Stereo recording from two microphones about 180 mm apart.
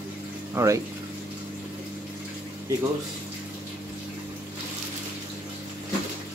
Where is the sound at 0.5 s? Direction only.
15° right (ahead or behind).